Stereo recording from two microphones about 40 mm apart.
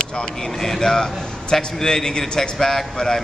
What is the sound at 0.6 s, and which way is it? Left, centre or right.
A man's voice, centre.